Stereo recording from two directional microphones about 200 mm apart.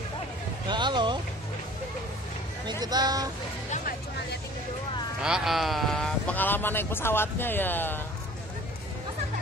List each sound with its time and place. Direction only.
0.7 s a sound: 20° right (ahead or behind)
2.8 s speech: 20° right (ahead or behind)
3.7 s music: 45° left (ahead or behind)
5.2 s speech: 5° right (ahead or behind)